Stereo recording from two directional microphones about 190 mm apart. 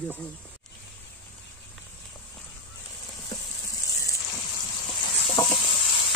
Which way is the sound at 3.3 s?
20° left (ahead or behind).